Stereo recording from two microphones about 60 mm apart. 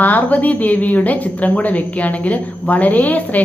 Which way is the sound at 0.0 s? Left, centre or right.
Left.